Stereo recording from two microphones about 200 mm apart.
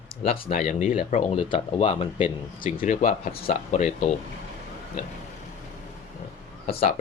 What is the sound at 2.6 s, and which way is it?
Speech, 40° left (ahead or behind).